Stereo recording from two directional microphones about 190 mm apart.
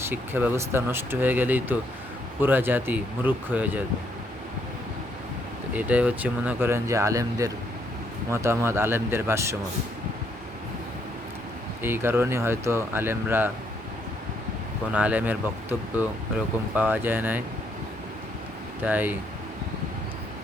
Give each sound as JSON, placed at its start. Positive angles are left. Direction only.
{"t": 0.0, "sound": "speech", "side_deg": -10}
{"t": 5.7, "sound": "speech", "side_deg": -5}
{"t": 11.8, "sound": "speech", "side_deg": -10}
{"t": 14.9, "sound": "speech", "side_deg": -10}
{"t": 16.7, "sound": "speech", "side_deg": -10}
{"t": 18.8, "sound": "speech", "side_deg": -10}